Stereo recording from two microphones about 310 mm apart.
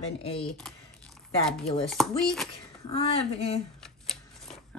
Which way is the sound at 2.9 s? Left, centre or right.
Centre.